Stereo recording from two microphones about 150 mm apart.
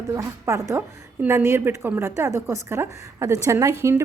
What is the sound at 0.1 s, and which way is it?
A woman's voice, 20° right (ahead or behind).